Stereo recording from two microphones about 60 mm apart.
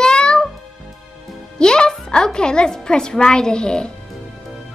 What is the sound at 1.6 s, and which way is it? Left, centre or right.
A woman's voice, centre.